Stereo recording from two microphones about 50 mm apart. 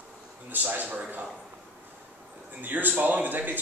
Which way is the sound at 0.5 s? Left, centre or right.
Right.